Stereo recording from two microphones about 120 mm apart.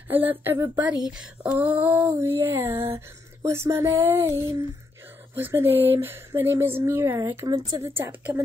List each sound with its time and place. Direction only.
0.1 s speech: 15° right (ahead or behind)
1.0 s a woman's voice: 5° right (ahead or behind)